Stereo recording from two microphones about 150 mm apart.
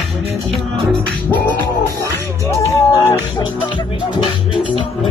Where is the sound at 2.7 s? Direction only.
20° left (ahead or behind).